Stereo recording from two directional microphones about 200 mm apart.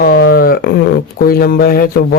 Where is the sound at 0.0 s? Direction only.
50° left (ahead or behind).